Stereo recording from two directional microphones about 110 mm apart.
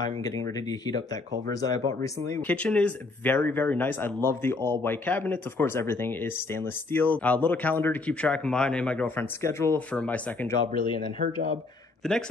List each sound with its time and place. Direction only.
0.2 s speech: 35° left (ahead or behind)
2.4 s speech: 10° left (ahead or behind)
9.9 s speech: 15° left (ahead or behind)
12.0 s a man's voice: 5° left (ahead or behind)